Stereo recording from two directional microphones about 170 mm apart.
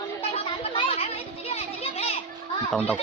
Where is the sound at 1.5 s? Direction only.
35° left (ahead or behind).